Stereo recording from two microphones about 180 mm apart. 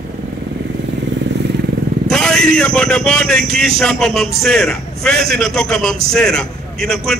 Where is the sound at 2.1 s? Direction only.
5° left (ahead or behind).